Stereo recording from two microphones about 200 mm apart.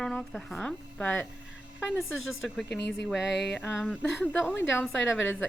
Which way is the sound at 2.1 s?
80° left.